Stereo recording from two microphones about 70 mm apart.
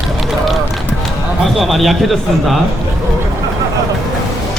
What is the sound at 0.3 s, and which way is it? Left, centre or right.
Run, centre.